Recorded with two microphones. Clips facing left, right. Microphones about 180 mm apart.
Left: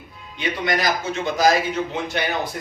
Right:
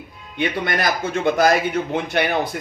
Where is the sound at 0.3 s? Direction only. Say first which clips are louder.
Right 1 dB; 55° right (ahead or behind).